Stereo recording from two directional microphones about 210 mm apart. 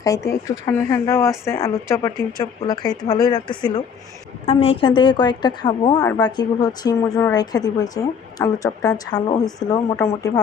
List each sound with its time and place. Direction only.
0.0 s a woman's voice: 15° left (ahead or behind)